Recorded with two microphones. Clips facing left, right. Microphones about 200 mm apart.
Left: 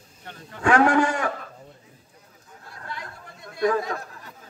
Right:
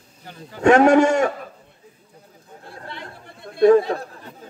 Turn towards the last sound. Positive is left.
turn(degrees=-30)  # may be behind; listen again after turning